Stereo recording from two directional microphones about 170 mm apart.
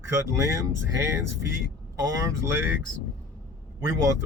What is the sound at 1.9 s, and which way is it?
Speech, 20° right (ahead or behind).